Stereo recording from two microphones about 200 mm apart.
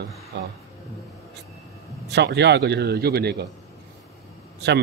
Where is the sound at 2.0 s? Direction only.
55° right (ahead or behind).